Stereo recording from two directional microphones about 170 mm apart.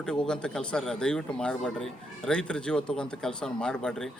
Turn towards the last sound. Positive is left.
turn(degrees=5)  # may be behind; listen again after turning